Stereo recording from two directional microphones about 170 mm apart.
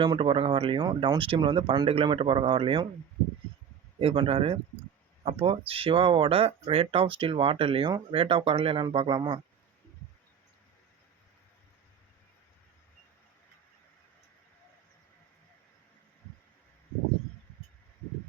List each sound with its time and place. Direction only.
0.0 s speech: 30° right (ahead or behind)
4.0 s speech: 35° right (ahead or behind)